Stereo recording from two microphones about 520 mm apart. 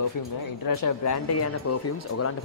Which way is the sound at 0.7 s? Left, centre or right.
Left.